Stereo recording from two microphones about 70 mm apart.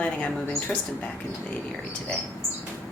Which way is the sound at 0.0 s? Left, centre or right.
Centre.